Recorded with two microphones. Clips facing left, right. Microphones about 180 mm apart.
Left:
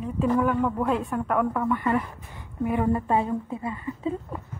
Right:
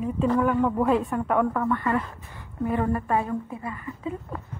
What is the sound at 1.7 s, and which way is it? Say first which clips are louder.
A woman's voice: left 1 dB; 15° left (ahead or behind).